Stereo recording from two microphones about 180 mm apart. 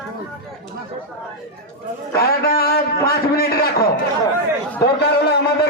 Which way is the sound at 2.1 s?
60° left (ahead or behind).